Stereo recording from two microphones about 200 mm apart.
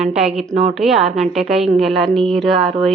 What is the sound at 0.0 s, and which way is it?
A woman's voice, 5° right (ahead or behind).